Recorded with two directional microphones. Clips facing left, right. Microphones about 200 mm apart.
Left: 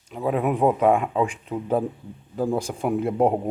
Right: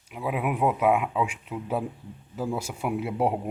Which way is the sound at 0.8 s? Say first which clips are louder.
Left 4 dB; 5° right (ahead or behind).